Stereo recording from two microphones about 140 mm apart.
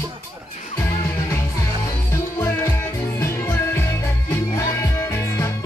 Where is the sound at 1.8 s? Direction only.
20° left (ahead or behind).